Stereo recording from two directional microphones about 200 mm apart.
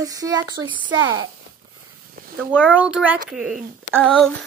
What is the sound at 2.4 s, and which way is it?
Speech, 10° left (ahead or behind).